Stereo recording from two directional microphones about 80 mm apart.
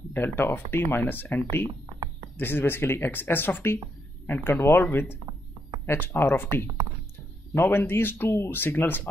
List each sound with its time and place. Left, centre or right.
0.1 s speech: left